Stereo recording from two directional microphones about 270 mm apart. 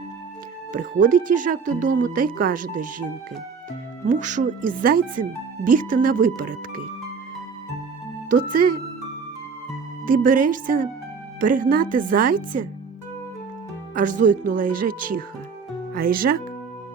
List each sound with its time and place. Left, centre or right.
0.7 s speech: right
4.1 s speech: right
8.3 s speech: right
10.1 s speech: right
13.9 s speech: right